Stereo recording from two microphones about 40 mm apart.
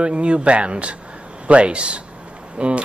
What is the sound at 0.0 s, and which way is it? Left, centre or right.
Speech, right.